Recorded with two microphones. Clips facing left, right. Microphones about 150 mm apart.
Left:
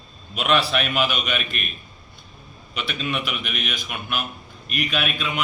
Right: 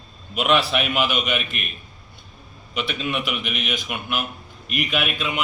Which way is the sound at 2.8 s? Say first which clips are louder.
Right 1 dB; 15° right (ahead or behind).